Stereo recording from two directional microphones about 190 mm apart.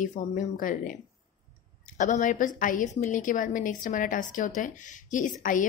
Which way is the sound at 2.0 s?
40° left (ahead or behind).